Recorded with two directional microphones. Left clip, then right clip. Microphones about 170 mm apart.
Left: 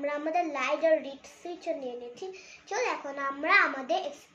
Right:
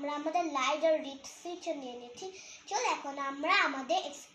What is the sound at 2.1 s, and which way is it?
A child's voice, 20° left (ahead or behind).